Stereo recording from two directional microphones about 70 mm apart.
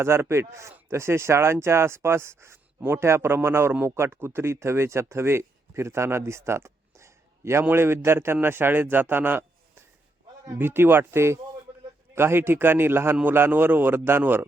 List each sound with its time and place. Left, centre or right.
0.0 s a man's voice: right
10.6 s speech: right